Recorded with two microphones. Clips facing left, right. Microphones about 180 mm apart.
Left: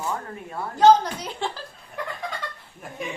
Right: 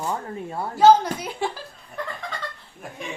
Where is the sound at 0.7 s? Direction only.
5° right (ahead or behind).